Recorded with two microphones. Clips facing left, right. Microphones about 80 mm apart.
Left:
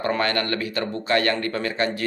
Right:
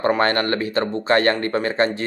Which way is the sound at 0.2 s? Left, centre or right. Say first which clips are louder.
Right 4 dB; right.